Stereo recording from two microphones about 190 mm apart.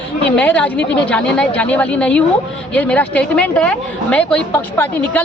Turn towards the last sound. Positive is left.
turn(degrees=5)  # may be behind; listen again after turning